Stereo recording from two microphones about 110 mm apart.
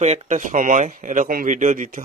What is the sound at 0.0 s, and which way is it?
Speech, 90° right.